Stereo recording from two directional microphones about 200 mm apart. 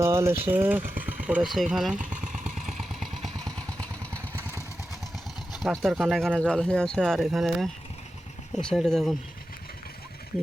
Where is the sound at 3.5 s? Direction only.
15° right (ahead or behind).